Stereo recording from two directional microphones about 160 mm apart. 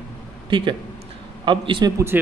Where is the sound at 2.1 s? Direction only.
10° right (ahead or behind).